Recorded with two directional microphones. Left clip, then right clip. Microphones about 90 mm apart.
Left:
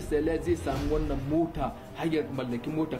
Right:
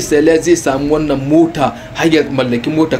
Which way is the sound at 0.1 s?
25° left (ahead or behind).